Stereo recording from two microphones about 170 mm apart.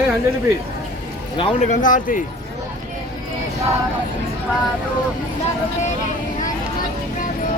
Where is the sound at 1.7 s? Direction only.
50° left (ahead or behind).